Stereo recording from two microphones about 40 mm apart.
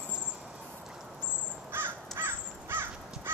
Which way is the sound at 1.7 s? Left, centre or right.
Right.